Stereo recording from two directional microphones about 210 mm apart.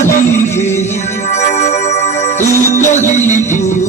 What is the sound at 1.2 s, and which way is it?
Music, 30° left (ahead or behind).